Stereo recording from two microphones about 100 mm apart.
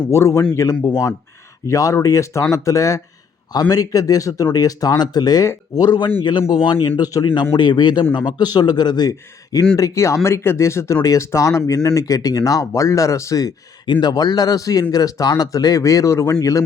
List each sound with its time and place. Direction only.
0.1 s a man's voice: 30° left (ahead or behind)
6.5 s speech: 55° left (ahead or behind)
7.0 s speech: 40° left (ahead or behind)
7.5 s a man's voice: 50° left (ahead or behind)